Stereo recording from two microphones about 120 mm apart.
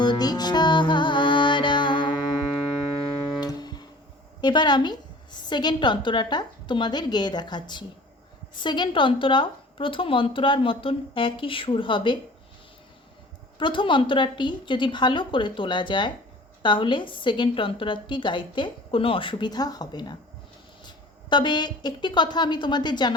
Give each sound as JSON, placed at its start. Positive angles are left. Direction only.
{"t": 0.0, "sound": "music", "side_deg": 35}
{"t": 3.4, "sound": "guitar", "side_deg": 35}
{"t": 4.4, "sound": "a woman's voice", "side_deg": 40}
{"t": 13.6, "sound": "a woman's voice", "side_deg": 40}